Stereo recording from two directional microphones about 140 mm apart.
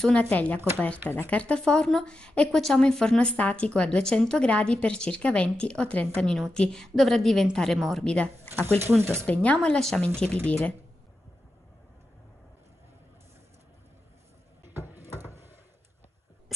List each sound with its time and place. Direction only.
0.0 s a woman's voice: 10° left (ahead or behind)
8.5 s speech: 15° right (ahead or behind)
9.2 s a woman's voice: 10° left (ahead or behind)
14.7 s a sound: 15° right (ahead or behind)